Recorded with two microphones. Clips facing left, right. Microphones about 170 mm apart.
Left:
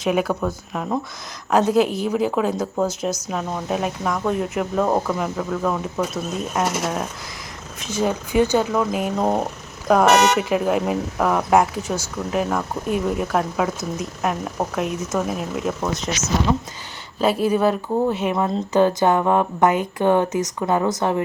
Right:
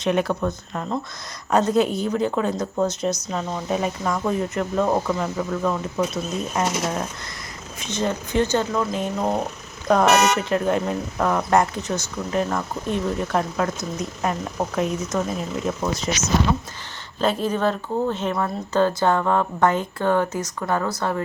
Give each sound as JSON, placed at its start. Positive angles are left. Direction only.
{"t": 0.0, "sound": "speech", "side_deg": 5}
{"t": 9.8, "sound": "speech", "side_deg": 5}